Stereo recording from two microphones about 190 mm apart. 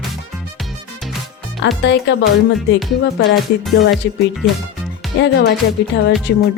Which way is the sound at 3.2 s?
60° left (ahead or behind).